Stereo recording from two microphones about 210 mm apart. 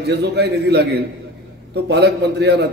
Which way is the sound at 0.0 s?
55° right (ahead or behind).